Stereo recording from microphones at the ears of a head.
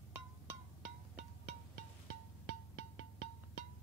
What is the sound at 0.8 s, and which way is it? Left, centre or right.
Music, right.